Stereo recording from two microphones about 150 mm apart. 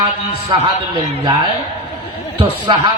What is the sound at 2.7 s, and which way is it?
Speech, 30° right (ahead or behind).